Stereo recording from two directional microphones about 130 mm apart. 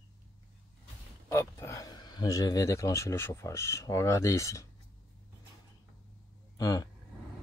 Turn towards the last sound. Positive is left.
turn(degrees=30)  # may be behind; listen again after turning